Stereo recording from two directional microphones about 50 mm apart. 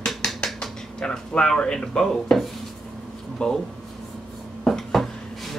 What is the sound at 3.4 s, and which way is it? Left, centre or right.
Speech, centre.